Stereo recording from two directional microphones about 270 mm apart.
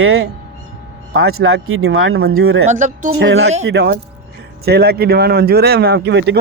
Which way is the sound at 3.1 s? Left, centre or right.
Right.